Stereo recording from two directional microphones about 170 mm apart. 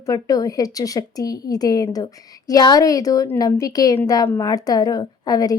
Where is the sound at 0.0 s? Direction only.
20° left (ahead or behind).